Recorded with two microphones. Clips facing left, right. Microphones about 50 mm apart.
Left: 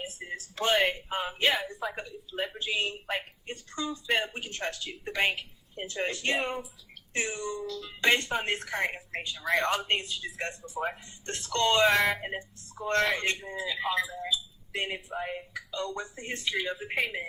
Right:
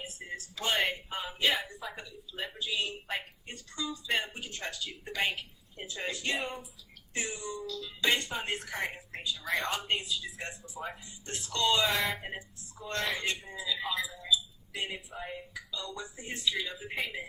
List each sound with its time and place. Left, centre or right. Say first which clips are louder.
0.2 s a sound: left 2 dB; left
0.5 s speech: left 5 dB; left
5.8 s speech: left 4 dB; left
14.2 s speech: right 1 dB; left